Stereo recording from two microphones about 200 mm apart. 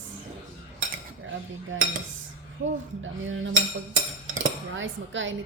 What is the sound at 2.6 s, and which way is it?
Speech, 60° right (ahead or behind).